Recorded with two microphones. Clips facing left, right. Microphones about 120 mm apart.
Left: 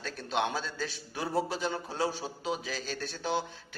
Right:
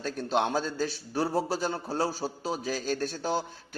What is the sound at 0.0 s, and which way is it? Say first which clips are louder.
A man's voice: right 4 dB; 45° right (ahead or behind).